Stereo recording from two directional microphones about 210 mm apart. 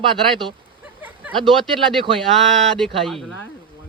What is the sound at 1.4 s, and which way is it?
A man's voice, centre (ahead or behind).